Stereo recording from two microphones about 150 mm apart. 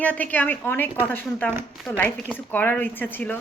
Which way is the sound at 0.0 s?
10° left (ahead or behind).